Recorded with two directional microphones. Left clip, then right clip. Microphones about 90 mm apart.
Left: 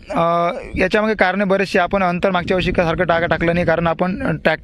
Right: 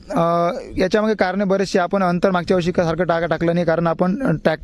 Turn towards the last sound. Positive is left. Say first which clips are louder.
# left 1 dB
turn(degrees=-55)  # may be behind; listen again after turning